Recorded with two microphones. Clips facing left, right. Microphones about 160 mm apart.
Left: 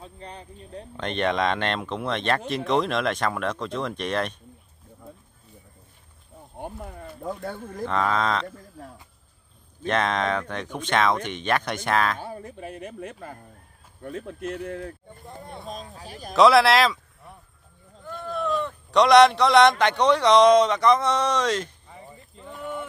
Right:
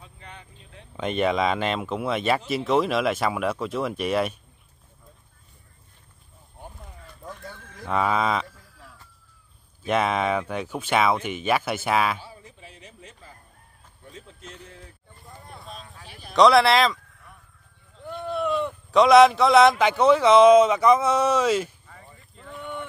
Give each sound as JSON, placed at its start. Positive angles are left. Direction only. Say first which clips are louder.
{"t": 0.0, "sound": "speech", "louder": "left 6 dB", "side_deg": 35}
{"t": 0.9, "sound": "speech", "louder": "right 2 dB", "side_deg": -5}
{"t": 6.6, "sound": "a sound", "louder": "left 9 dB", "side_deg": 60}
{"t": 7.8, "sound": "speech", "louder": "right 1 dB", "side_deg": -10}
{"t": 8.5, "sound": "a sound", "louder": "left 9 dB", "side_deg": 50}
{"t": 9.8, "sound": "speech", "louder": "right 1 dB", "side_deg": -10}
{"t": 12.2, "sound": "a man's voice", "louder": "left 9 dB", "side_deg": 55}
{"t": 15.6, "sound": "speech", "louder": "left 6 dB", "side_deg": 40}
{"t": 16.3, "sound": "speech", "louder": "even", "side_deg": 0}
{"t": 18.0, "sound": "a sound", "louder": "right 2 dB", "side_deg": -15}
{"t": 18.9, "sound": "speech", "louder": "right 1 dB", "side_deg": 0}
{"t": 21.8, "sound": "a sound", "louder": "left 4 dB", "side_deg": 20}